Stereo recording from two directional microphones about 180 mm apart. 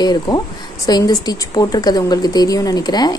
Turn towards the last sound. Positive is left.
turn(degrees=20)  # may be behind; listen again after turning